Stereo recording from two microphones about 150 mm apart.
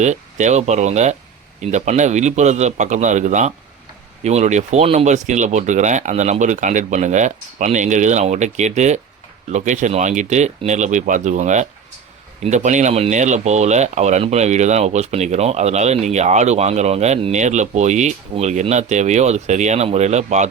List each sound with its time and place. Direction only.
0.0 s speech: 50° right (ahead or behind)